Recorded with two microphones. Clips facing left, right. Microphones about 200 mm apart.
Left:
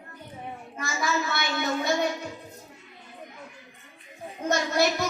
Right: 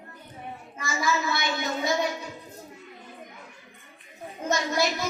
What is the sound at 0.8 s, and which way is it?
A child's voice, 55° left (ahead or behind).